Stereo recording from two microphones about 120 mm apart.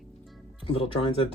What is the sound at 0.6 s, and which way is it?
Speech, 55° left (ahead or behind).